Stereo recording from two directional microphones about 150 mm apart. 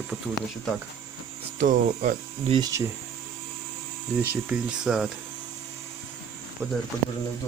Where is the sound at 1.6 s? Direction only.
60° right (ahead or behind).